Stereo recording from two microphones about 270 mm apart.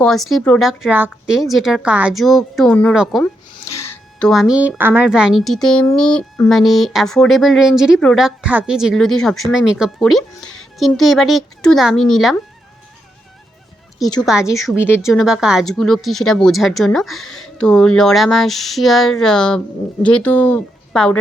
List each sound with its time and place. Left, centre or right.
0.0 s a woman's voice: centre
14.2 s a woman's voice: centre
15.0 s a woman's voice: centre